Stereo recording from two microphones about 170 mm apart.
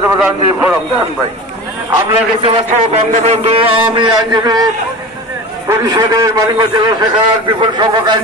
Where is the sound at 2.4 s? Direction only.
30° right (ahead or behind).